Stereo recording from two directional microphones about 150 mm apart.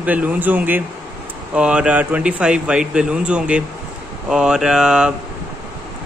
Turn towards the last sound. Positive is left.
turn(degrees=-5)  # may be behind; listen again after turning